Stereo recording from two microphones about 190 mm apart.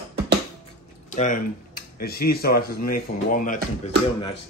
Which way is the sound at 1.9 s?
55° left (ahead or behind).